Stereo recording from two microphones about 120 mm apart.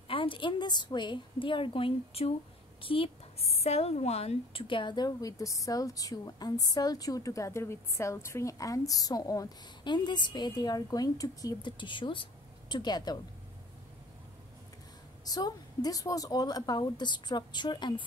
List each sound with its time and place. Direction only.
0.1 s a woman's voice: 45° left (ahead or behind)
11.8 s a woman's voice: 40° left (ahead or behind)
15.2 s a woman's voice: 35° left (ahead or behind)